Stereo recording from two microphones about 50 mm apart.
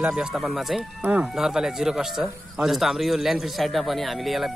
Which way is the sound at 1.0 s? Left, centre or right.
Right.